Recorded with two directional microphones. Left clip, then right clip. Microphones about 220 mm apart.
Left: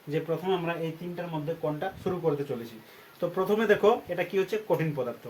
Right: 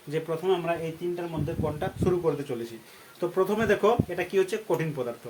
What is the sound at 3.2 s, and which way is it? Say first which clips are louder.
Speech: right 1 dB; 20° right (ahead or behind).